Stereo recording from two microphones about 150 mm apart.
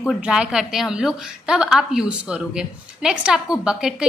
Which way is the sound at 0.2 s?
5° right (ahead or behind).